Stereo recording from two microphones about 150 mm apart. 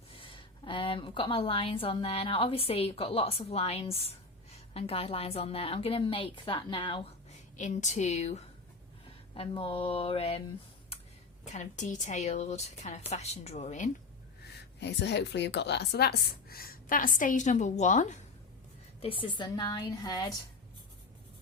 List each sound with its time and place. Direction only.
0.1 s a woman's voice: 35° left (ahead or behind)
7.5 s speech: 55° left (ahead or behind)
9.3 s a sound: 40° left (ahead or behind)
11.4 s speech: 55° left (ahead or behind)
15.4 s a woman's voice: 90° left; by 18.2 s 50° left (ahead or behind)
19.0 s a woman's voice: 35° left (ahead or behind)